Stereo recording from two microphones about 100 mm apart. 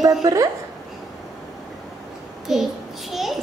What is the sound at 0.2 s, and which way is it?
Speech, 35° right (ahead or behind).